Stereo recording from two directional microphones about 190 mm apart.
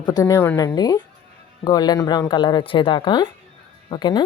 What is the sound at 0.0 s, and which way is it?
A woman's voice, 20° left (ahead or behind).